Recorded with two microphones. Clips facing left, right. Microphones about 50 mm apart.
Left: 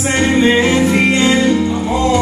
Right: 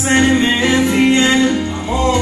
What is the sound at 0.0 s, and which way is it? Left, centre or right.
Music, right.